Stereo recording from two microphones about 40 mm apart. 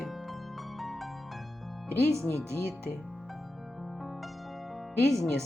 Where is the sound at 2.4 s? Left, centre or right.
Right.